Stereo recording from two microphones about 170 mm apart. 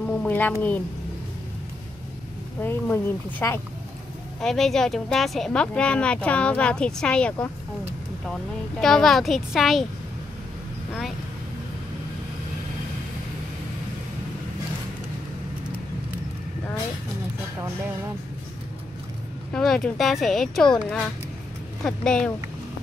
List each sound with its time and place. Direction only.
0.2 s speech: 10° left (ahead or behind)
2.6 s speech: 10° left (ahead or behind)
8.8 s speech: centre (ahead or behind)
19.5 s speech: 5° left (ahead or behind)